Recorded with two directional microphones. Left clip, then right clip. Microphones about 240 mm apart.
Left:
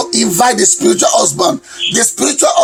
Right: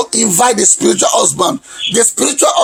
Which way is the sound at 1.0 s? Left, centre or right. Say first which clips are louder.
Left 1 dB; centre.